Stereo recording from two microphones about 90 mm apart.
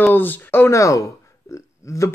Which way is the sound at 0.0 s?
20° left (ahead or behind).